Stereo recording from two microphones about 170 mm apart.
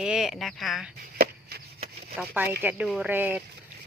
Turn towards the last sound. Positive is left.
turn(degrees=-10)  # may be behind; listen again after turning